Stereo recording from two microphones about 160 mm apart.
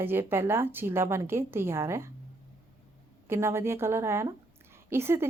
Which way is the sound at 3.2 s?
15° right (ahead or behind).